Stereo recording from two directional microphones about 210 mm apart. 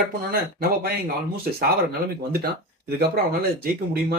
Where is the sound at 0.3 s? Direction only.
45° right (ahead or behind).